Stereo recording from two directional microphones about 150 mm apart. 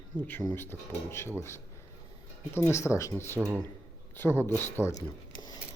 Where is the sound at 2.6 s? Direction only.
20° left (ahead or behind).